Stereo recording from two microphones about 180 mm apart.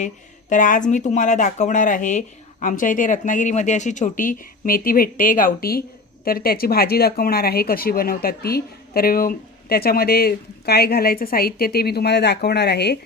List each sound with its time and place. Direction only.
0.5 s speech: 45° left (ahead or behind); by 13.0 s 65° left (ahead or behind)